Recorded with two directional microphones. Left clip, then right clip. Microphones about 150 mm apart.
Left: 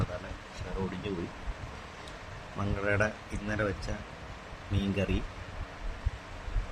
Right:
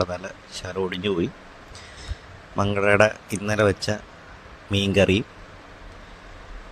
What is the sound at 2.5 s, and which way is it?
Speech, 90° right.